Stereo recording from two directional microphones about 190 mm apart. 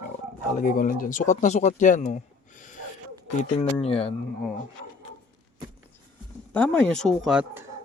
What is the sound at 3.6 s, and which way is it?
Speech, 30° left (ahead or behind).